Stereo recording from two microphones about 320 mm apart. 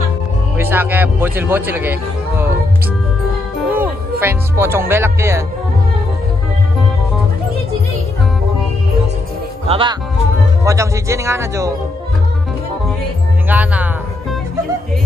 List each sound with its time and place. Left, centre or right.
0.6 s a man's voice: centre
3.7 s speech: centre
9.7 s a man's voice: centre
13.5 s speech: centre